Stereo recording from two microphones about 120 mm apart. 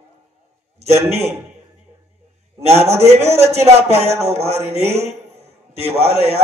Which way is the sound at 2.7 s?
60° right (ahead or behind).